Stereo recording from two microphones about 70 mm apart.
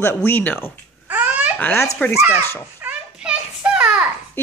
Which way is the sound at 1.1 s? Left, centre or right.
Right.